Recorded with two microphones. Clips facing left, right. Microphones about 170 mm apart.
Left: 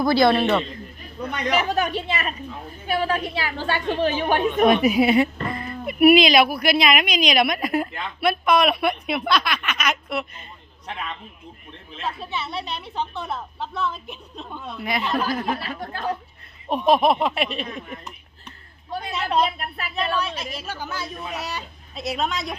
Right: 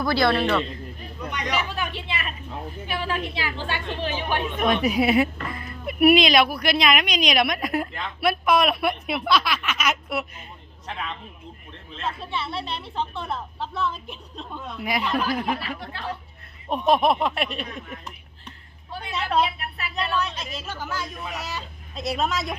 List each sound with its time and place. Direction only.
0.0 s speech: 15° left (ahead or behind)
1.5 s a woman's voice: 45° left (ahead or behind)
4.7 s speech: 5° left (ahead or behind)
11.9 s speech: 5° left (ahead or behind)
14.8 s speech: 10° right (ahead or behind)
15.8 s a woman's voice: 40° left (ahead or behind)
16.6 s speech: 5° left (ahead or behind)
18.9 s a woman's voice: 40° left (ahead or behind)
20.2 s a woman's voice: 10° left (ahead or behind)
20.9 s speech: 20° left (ahead or behind)
21.9 s speech: centre (ahead or behind)